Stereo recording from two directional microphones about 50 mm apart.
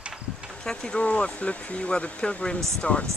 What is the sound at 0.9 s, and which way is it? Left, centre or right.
Speech, left.